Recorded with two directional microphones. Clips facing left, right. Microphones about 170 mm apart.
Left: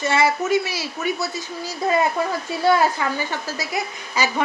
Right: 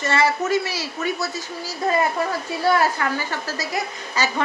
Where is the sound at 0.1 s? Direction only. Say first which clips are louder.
Left 1 dB; 10° left (ahead or behind).